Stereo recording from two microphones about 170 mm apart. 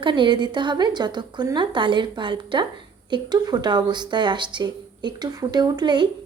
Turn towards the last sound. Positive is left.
turn(degrees=-25)  # may be behind; listen again after turning